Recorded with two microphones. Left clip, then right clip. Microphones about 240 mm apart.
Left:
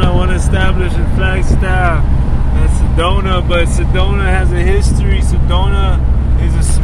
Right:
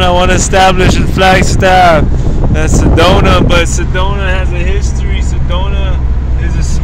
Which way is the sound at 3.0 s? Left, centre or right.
Right.